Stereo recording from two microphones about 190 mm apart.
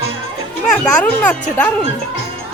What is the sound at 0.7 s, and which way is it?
Speech, 5° left (ahead or behind).